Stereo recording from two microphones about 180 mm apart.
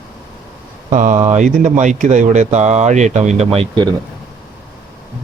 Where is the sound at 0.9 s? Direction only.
40° right (ahead or behind).